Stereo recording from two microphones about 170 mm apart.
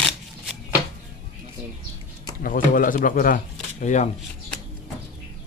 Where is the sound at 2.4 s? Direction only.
55° left (ahead or behind).